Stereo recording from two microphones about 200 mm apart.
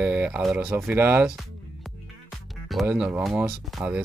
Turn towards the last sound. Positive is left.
turn(degrees=-10)  # may be behind; listen again after turning